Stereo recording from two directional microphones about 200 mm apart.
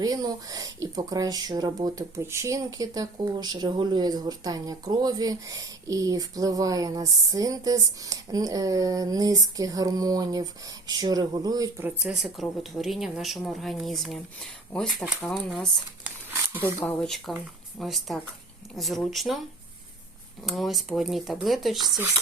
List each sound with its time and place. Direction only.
0.0 s speech: 20° right (ahead or behind); by 15.6 s centre (ahead or behind)
16.0 s a sound: 10° right (ahead or behind)
16.8 s speech: centre (ahead or behind)
20.4 s speech: centre (ahead or behind)